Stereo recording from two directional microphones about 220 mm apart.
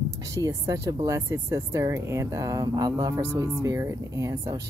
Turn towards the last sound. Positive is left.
turn(degrees=-15)  # may be behind; listen again after turning